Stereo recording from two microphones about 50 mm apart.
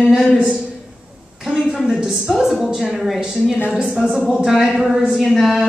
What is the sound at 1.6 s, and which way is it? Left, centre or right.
Speech, centre.